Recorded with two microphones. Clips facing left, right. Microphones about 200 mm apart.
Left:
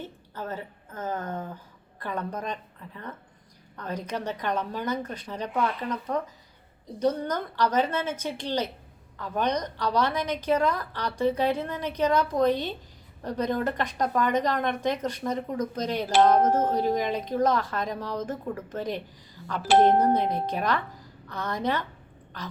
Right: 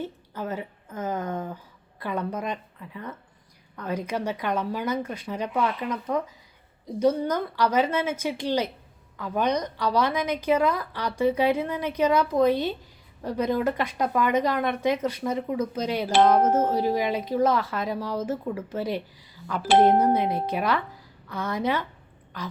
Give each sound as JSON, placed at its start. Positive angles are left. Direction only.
{"t": 0.3, "sound": "speech", "side_deg": -10}